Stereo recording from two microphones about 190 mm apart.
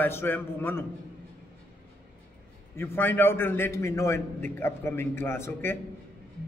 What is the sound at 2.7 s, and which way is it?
A man's voice, 10° left (ahead or behind).